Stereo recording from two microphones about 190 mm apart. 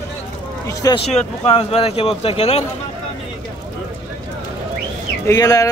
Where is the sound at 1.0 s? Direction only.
35° left (ahead or behind).